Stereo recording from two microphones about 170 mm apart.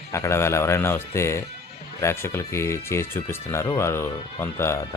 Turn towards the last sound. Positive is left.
turn(degrees=15)  # may be behind; listen again after turning